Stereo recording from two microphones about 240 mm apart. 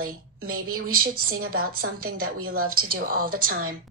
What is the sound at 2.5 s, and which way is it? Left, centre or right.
Speech, right.